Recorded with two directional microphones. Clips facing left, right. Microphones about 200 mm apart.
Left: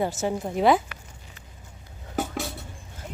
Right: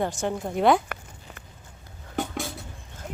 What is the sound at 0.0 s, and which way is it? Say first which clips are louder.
Speech: left 1 dB; 5° left (ahead or behind).